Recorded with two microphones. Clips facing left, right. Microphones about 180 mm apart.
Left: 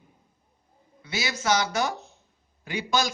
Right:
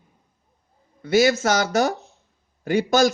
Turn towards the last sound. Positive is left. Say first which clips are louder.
# right 9 dB
turn(degrees=-50)  # may be behind; listen again after turning